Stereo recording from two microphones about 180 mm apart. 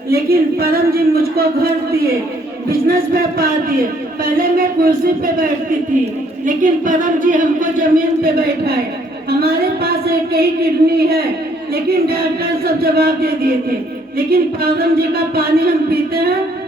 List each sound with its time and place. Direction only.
0.1 s speech: 60° right (ahead or behind)
2.6 s speech: 55° right (ahead or behind)